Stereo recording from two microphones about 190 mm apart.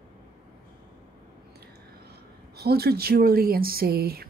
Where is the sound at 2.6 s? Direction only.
55° right (ahead or behind).